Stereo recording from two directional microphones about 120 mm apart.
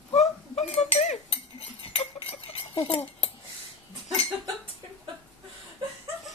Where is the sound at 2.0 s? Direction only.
55° left (ahead or behind).